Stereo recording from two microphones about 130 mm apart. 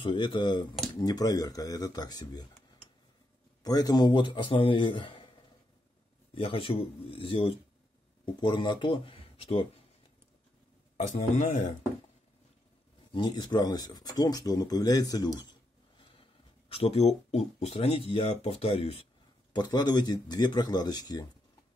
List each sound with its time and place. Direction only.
0.0 s speech: 40° left (ahead or behind)
3.6 s speech: 30° left (ahead or behind)
6.3 s speech: 45° left (ahead or behind)
11.0 s a man's voice: 65° left (ahead or behind)
13.1 s speech: 35° left (ahead or behind)
16.0 s speech: 45° left (ahead or behind)
19.5 s speech: 30° left (ahead or behind)